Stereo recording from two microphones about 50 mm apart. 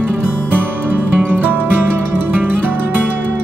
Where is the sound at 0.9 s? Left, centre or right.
Right.